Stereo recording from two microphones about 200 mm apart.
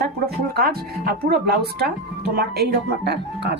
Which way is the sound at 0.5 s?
50° right (ahead or behind).